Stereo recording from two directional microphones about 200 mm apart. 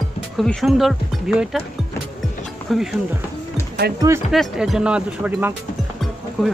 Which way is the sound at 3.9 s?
15° right (ahead or behind).